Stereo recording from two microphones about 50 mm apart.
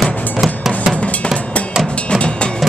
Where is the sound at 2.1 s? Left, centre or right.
Centre.